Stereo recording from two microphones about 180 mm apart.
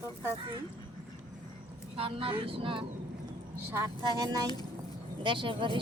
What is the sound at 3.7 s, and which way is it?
A woman's voice, 15° right (ahead or behind).